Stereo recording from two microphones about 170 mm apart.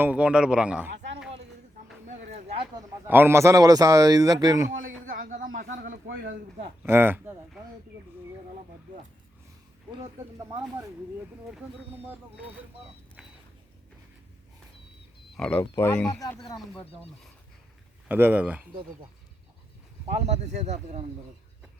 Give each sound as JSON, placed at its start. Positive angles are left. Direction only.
{"t": 0.0, "sound": "a man's voice", "side_deg": -5}
{"t": 0.9, "sound": "a sound", "side_deg": -90}
{"t": 2.0, "sound": "a sound", "side_deg": -40}
{"t": 3.1, "sound": "speech", "side_deg": -15}
{"t": 5.0, "sound": "speech", "side_deg": -55}
{"t": 6.8, "sound": "a man's voice", "side_deg": -15}
{"t": 9.9, "sound": "speech", "side_deg": -25}
{"t": 15.4, "sound": "speech", "side_deg": 10}
{"t": 18.1, "sound": "a man's voice", "side_deg": -10}
{"t": 20.1, "sound": "speech", "side_deg": -40}